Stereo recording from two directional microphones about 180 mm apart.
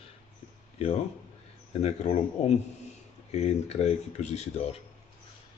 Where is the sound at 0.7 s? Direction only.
35° left (ahead or behind).